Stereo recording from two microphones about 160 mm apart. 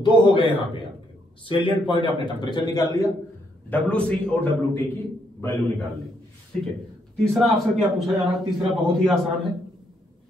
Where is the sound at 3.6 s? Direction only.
10° left (ahead or behind).